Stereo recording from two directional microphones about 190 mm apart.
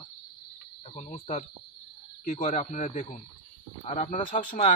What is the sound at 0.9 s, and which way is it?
Speech, 40° left (ahead or behind).